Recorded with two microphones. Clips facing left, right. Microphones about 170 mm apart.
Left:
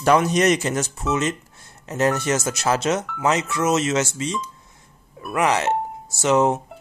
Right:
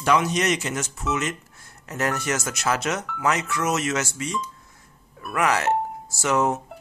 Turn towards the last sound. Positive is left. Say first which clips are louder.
# left 4 dB
turn(degrees=20)  # may be behind; listen again after turning